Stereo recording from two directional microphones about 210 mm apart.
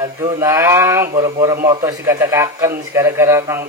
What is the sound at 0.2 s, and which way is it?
A man's voice, 15° right (ahead or behind).